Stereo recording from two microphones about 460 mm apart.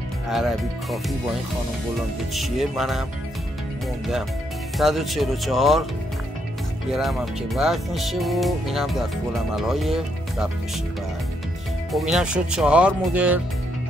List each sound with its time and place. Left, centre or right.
0.3 s speech: centre
2.3 s speech: centre
4.7 s speech: centre
6.9 s speech: centre
11.9 s speech: centre